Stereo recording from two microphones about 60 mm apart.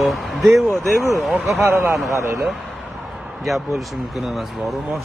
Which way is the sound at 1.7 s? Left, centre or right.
Right.